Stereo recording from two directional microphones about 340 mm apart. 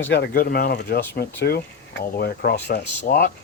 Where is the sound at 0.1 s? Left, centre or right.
Left.